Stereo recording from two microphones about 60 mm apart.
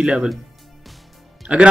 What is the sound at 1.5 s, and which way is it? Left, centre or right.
Speech, right.